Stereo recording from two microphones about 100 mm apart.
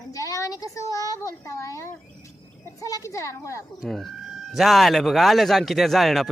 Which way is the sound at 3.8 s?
5° left (ahead or behind).